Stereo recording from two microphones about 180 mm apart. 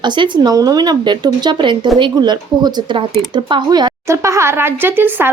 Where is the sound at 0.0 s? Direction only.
25° right (ahead or behind).